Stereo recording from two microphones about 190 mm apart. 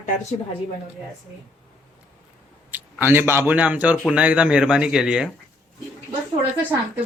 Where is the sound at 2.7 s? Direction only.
10° right (ahead or behind).